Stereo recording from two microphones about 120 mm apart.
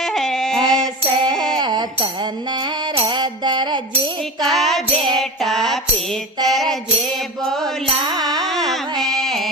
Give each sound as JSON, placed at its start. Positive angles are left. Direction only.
{"t": 0.0, "sound": "a sound", "side_deg": 5}
{"t": 1.5, "sound": "a sound", "side_deg": -35}
{"t": 2.9, "sound": "music", "side_deg": -40}
{"t": 4.5, "sound": "music", "side_deg": 0}
{"t": 7.4, "sound": "mantra", "side_deg": 5}
{"t": 8.0, "sound": "music", "side_deg": -35}
{"t": 8.7, "sound": "music", "side_deg": 0}